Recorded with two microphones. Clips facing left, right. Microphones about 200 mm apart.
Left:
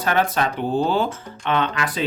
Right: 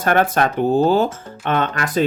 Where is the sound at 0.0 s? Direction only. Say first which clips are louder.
Right 4 dB; 50° right (ahead or behind).